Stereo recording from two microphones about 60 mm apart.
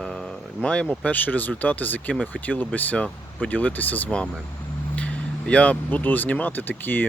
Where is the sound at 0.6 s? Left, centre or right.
Left.